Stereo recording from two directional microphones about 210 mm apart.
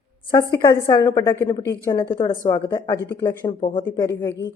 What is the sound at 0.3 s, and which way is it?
A woman's voice, 20° left (ahead or behind).